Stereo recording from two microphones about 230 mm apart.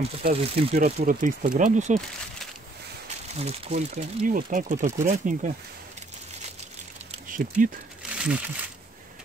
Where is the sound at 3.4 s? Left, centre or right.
Right.